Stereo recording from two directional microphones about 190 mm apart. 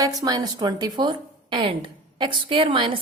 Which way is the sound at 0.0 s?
20° right (ahead or behind).